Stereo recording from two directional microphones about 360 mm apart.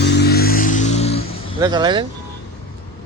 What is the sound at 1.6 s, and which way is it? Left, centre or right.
Speech, centre.